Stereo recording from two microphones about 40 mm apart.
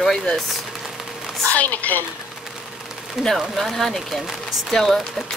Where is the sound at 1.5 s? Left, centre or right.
Left.